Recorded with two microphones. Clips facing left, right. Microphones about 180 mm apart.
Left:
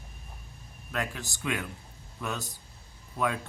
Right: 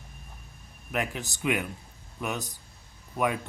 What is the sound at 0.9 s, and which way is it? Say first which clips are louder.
Speech: right 3 dB; 20° right (ahead or behind).